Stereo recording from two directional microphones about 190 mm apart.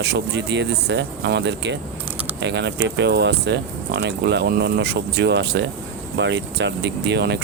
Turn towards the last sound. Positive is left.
turn(degrees=-65)  # may be behind; listen again after turning